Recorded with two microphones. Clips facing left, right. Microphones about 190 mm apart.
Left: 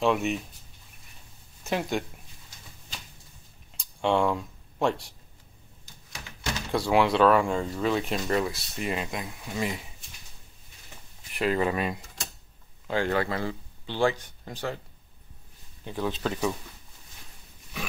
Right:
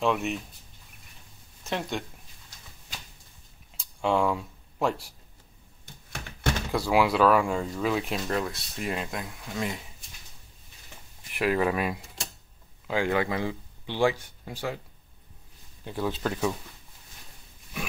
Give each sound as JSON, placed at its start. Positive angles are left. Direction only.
{"t": 0.0, "sound": "speech", "side_deg": 0}
{"t": 1.7, "sound": "speech", "side_deg": 5}
{"t": 3.7, "sound": "a sound", "side_deg": 0}
{"t": 5.9, "sound": "a sound", "side_deg": -55}
{"t": 6.7, "sound": "speech", "side_deg": -5}
{"t": 11.3, "sound": "speech", "side_deg": -5}
{"t": 15.8, "sound": "speech", "side_deg": -10}